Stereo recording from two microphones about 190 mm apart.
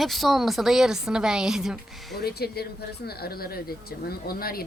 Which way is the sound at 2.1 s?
55° left (ahead or behind).